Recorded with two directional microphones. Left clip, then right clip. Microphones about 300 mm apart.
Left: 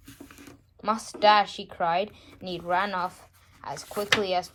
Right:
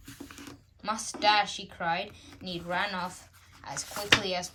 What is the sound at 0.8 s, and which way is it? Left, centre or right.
A woman's voice, centre.